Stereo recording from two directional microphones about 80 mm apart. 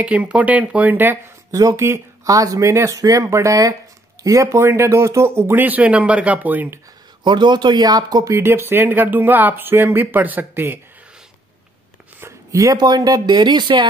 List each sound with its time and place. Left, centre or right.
0.0 s speech: centre
1.5 s speech: right
7.2 s speech: right
8.3 s speech: right
12.2 s a sound: right
12.8 s speech: right